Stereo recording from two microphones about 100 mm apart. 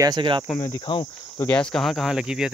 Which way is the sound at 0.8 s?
55° left (ahead or behind).